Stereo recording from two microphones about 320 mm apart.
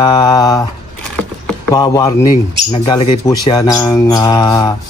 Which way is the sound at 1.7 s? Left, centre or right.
Centre.